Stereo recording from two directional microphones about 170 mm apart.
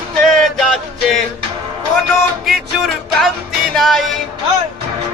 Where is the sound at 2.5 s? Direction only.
Centre (ahead or behind).